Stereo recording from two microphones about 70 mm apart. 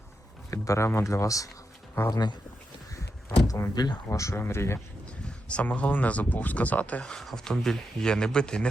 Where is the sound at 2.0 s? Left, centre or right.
Left.